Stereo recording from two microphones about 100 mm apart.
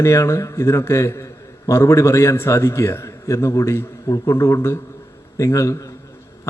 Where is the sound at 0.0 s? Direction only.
30° left (ahead or behind).